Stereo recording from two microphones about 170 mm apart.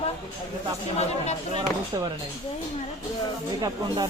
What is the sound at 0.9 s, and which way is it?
Speech, 40° left (ahead or behind).